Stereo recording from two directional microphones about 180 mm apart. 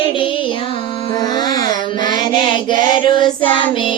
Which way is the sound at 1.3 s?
20° left (ahead or behind).